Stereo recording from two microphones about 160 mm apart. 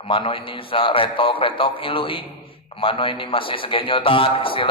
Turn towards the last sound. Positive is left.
turn(degrees=35)  # may be behind; listen again after turning